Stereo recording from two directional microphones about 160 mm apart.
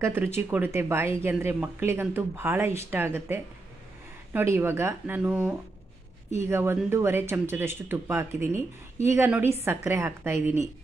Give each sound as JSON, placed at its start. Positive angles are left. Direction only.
{"t": 0.0, "sound": "speech", "side_deg": -15}